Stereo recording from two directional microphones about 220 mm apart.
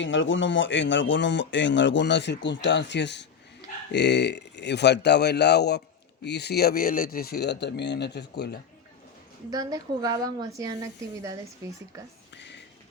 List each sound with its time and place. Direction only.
0.0 s speech: 55° left (ahead or behind)
9.5 s a woman's voice: 15° right (ahead or behind)
11.9 s a woman's voice: 15° right (ahead or behind)
12.3 s a sound: 55° left (ahead or behind)